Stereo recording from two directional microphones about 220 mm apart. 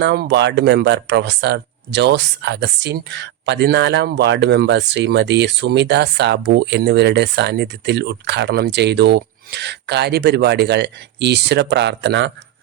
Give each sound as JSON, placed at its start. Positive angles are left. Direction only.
{"t": 0.0, "sound": "speech", "side_deg": -50}